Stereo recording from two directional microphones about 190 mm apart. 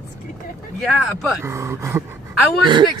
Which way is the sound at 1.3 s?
15° right (ahead or behind).